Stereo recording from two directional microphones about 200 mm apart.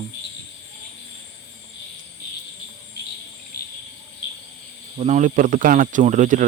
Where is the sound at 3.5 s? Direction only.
50° left (ahead or behind).